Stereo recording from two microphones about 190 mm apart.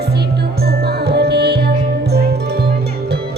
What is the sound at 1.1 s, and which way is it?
Music, 60° right (ahead or behind).